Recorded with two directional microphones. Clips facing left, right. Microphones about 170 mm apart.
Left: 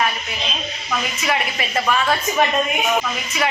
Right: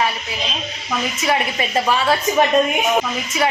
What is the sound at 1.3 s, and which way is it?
Speech, 25° right (ahead or behind).